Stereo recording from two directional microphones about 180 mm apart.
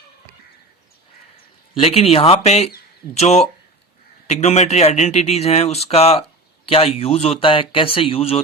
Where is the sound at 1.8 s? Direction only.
35° left (ahead or behind).